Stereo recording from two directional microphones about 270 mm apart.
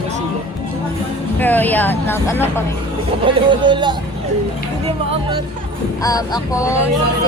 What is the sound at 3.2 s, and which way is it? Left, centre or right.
Speech, centre.